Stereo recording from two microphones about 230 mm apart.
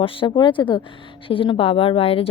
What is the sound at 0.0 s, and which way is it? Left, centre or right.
A woman's voice, left.